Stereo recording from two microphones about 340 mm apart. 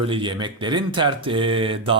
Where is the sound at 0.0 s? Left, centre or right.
Centre.